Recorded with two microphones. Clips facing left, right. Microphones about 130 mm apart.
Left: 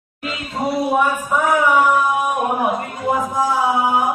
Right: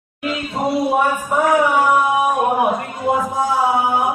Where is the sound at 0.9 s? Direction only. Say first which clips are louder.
Right 1 dB; 35° right (ahead or behind).